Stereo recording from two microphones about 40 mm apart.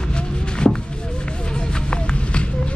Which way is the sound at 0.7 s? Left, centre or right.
Centre.